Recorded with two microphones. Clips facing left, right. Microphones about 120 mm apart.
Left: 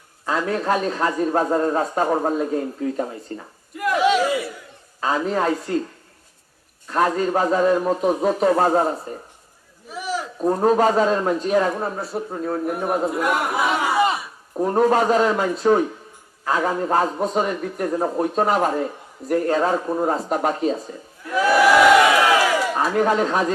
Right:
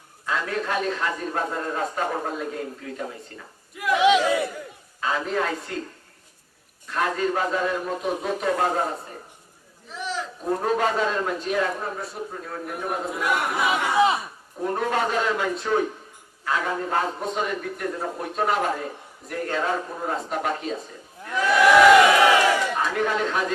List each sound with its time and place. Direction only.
0.3 s speech: 35° left (ahead or behind)
3.8 s speech: centre (ahead or behind)
4.9 s speech: 35° left (ahead or behind)
6.8 s speech: 35° left (ahead or behind)
9.9 s a sound: 10° left (ahead or behind)
10.4 s speech: 35° left (ahead or behind)
13.1 s speech: centre (ahead or behind)
14.6 s speech: 35° left (ahead or behind)
21.3 s speech: 5° left (ahead or behind)
22.7 s speech: 40° left (ahead or behind)